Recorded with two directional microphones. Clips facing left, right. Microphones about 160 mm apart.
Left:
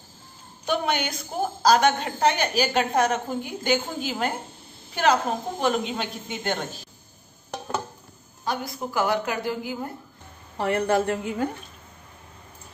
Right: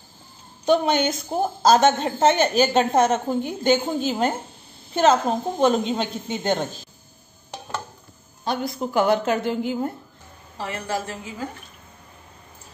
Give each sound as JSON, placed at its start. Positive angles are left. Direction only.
{"t": 0.7, "sound": "a woman's voice", "side_deg": -25}
{"t": 8.5, "sound": "a woman's voice", "side_deg": -25}
{"t": 10.6, "sound": "a woman's voice", "side_deg": 60}